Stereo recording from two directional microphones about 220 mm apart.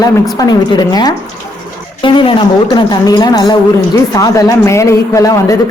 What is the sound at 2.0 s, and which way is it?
A woman's voice, 20° left (ahead or behind).